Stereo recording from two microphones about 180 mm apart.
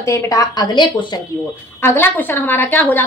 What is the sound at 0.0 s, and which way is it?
A woman's voice, 15° left (ahead or behind).